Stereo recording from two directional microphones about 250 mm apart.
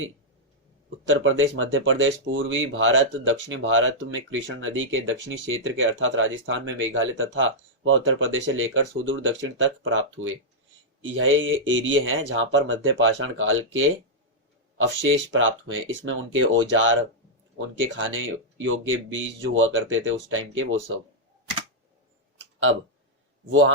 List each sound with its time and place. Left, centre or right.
1.0 s speech: right
15.3 s speech: right
17.9 s speech: right
23.5 s speech: right